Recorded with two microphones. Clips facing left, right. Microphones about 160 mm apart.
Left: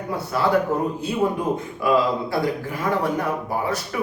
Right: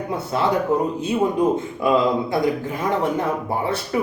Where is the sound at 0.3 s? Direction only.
25° right (ahead or behind).